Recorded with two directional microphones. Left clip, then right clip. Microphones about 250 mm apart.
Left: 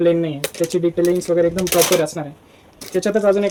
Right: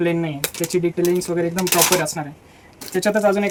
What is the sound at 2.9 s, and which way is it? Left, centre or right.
Speech, centre.